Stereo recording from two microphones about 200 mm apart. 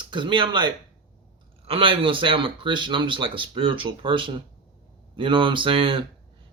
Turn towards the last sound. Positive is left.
turn(degrees=-25)  # may be behind; listen again after turning